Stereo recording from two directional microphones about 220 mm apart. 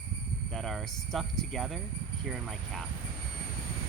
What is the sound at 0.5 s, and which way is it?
Speech, centre (ahead or behind).